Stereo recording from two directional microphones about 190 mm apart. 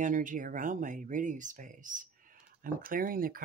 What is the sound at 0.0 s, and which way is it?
Speech, 45° right (ahead or behind).